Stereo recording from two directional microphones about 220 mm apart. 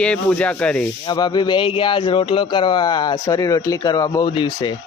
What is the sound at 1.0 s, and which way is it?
Speech, 20° left (ahead or behind).